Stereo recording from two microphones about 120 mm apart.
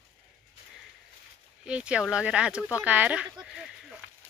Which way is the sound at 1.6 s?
10° right (ahead or behind).